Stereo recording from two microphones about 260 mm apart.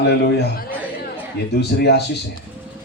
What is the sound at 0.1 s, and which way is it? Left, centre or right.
Speech, left.